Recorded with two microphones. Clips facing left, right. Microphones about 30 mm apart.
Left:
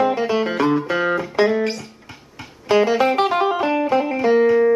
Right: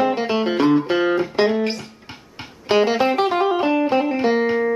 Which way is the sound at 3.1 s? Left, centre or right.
Centre.